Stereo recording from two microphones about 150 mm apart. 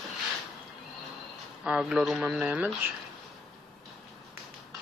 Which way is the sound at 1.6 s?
5° right (ahead or behind).